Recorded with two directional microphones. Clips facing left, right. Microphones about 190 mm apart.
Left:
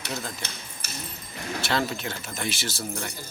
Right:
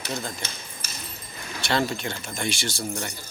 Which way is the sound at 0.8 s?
65° left (ahead or behind).